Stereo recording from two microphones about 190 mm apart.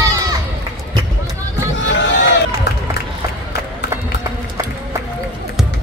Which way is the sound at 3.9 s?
15° right (ahead or behind).